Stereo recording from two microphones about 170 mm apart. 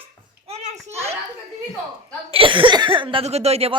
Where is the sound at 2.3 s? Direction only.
30° right (ahead or behind).